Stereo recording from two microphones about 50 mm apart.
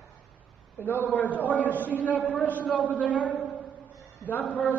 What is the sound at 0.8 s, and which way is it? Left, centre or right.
Speech, left.